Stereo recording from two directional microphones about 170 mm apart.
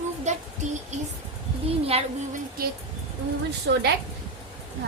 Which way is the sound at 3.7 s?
90° right.